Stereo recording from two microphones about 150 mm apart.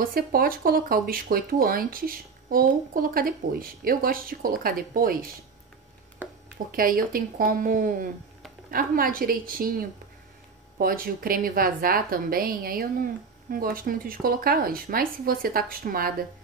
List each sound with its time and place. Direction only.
0.0 s a woman's voice: 75° right (ahead or behind)
6.2 s a sound: 15° right (ahead or behind)
6.7 s a woman's voice: 75° right (ahead or behind)